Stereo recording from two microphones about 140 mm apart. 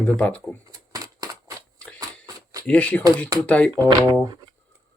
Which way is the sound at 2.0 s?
25° right (ahead or behind).